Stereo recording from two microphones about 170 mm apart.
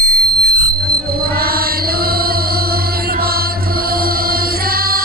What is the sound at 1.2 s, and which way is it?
Music, 65° right (ahead or behind).